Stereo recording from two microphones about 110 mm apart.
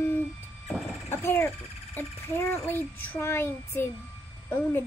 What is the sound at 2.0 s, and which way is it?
A child's voice, 20° left (ahead or behind).